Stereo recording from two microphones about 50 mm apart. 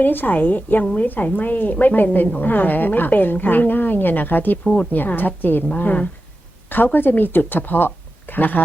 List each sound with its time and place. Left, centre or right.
0.0 s a woman's voice: left
4.6 s speech: centre
4.9 s a woman's voice: left